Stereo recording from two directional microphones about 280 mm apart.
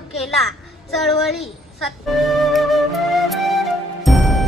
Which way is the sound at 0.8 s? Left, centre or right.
Centre.